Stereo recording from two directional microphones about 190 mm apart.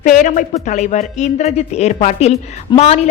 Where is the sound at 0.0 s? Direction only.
40° left (ahead or behind).